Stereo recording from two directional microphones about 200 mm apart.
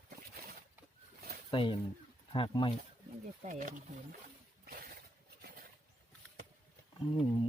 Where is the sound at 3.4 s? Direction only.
40° right (ahead or behind).